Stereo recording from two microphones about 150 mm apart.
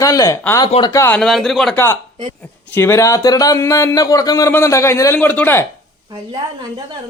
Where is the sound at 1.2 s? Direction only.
Centre (ahead or behind).